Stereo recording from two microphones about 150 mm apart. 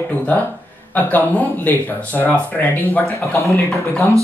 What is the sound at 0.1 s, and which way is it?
Speech, 10° left (ahead or behind).